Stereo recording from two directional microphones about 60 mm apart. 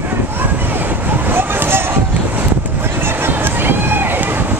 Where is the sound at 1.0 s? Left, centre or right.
Right.